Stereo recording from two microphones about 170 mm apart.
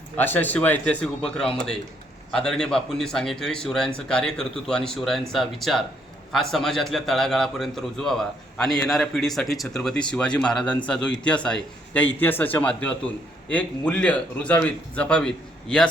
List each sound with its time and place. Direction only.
0.2 s a man's voice: 10° left (ahead or behind)